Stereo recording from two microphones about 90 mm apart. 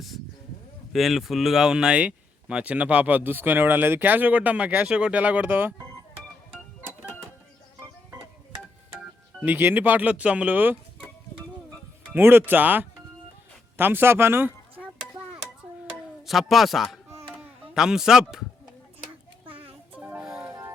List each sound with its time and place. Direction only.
0.9 s speech: centre (ahead or behind); by 5.7 s 20° right (ahead or behind)
9.4 s speech: 20° right (ahead or behind)
12.1 s speech: 25° right (ahead or behind)
16.2 s a man's voice: centre (ahead or behind)
19.5 s music: 15° right (ahead or behind)